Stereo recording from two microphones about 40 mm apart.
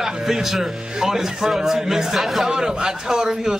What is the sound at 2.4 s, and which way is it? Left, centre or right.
A man's voice, centre.